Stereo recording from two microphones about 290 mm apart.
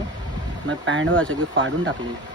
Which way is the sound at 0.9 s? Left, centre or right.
Right.